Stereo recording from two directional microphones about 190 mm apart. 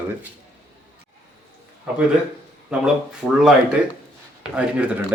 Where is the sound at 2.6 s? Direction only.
5° right (ahead or behind).